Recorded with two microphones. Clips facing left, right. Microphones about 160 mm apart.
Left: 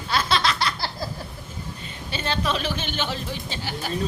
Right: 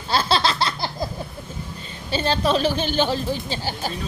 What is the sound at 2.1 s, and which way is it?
Speech, 35° right (ahead or behind).